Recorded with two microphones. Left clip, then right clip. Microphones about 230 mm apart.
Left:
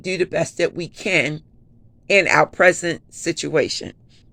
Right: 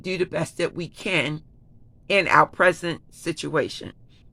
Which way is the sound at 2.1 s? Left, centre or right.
Centre.